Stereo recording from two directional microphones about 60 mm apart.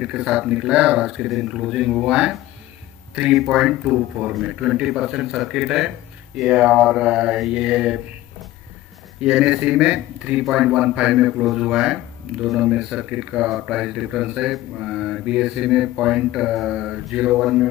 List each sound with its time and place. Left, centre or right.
0.0 s speech: centre
3.3 s speech: centre
4.3 s speech: centre
9.2 s speech: centre
10.4 s speech: centre